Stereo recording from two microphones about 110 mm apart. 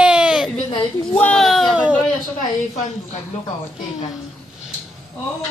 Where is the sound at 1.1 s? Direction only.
10° left (ahead or behind).